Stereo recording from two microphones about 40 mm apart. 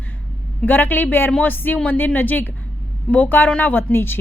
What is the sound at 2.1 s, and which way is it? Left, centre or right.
A woman's voice, left.